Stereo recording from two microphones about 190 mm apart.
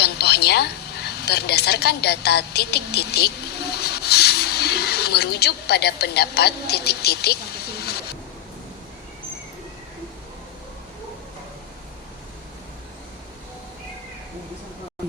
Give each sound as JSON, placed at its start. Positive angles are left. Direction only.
{"t": 0.0, "sound": "a woman's voice", "side_deg": 60}